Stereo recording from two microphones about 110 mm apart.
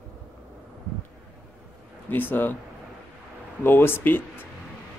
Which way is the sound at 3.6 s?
20° left (ahead or behind).